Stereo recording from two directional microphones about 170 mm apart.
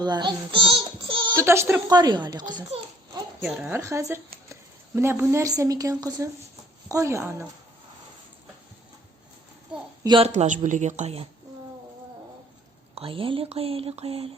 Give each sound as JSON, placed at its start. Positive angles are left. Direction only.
{"t": 0.0, "sound": "speech", "side_deg": -25}
{"t": 1.4, "sound": "speech", "side_deg": -15}
{"t": 3.4, "sound": "a woman's voice", "side_deg": -5}
{"t": 10.0, "sound": "speech", "side_deg": -25}
{"t": 10.2, "sound": "a woman's voice", "side_deg": -45}
{"t": 12.9, "sound": "speech", "side_deg": -35}